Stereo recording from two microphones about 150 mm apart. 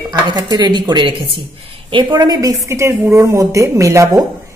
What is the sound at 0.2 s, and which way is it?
Speech, 30° right (ahead or behind).